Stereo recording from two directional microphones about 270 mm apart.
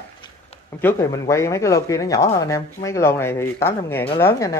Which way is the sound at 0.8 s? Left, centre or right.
Centre.